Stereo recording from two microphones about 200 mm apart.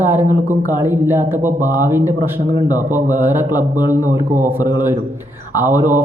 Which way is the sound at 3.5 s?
15° left (ahead or behind).